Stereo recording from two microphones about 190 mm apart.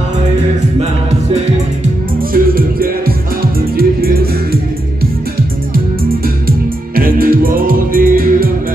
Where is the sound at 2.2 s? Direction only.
50° right (ahead or behind).